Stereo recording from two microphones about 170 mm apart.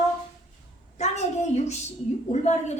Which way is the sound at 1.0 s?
40° left (ahead or behind).